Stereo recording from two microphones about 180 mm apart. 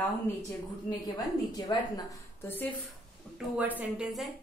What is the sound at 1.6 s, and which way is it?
Speech, 20° left (ahead or behind).